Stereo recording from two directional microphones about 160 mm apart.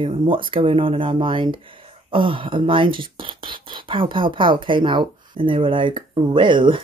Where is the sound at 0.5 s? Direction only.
35° right (ahead or behind).